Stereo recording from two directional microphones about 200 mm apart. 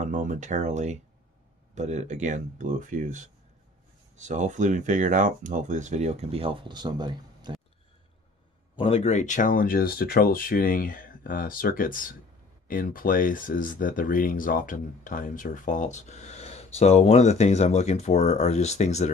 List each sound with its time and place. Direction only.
0.0 s speech: 40° right (ahead or behind); by 7.5 s 20° right (ahead or behind)
8.7 s speech: 30° left (ahead or behind)